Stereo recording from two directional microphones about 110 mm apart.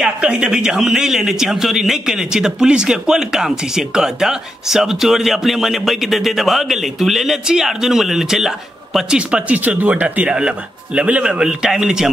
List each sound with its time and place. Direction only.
0.0 s a man's voice: 10° right (ahead or behind)